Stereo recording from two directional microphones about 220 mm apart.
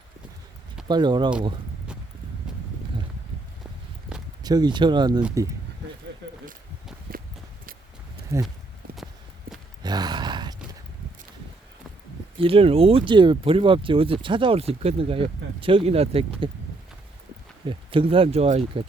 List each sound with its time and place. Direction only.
0.9 s speech: 20° right (ahead or behind)
4.4 s speech: 20° right (ahead or behind)
8.3 s speech: 15° right (ahead or behind)
9.5 s sigh: 40° right (ahead or behind)
9.8 s gasp: 20° right (ahead or behind)
12.4 s speech: 25° right (ahead or behind)
17.7 s speech: 25° right (ahead or behind)